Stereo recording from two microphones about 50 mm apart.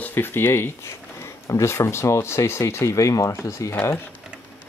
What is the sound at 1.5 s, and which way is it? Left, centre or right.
Speech, left.